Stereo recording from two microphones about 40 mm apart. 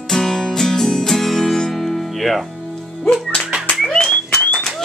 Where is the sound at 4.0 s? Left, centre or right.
Centre.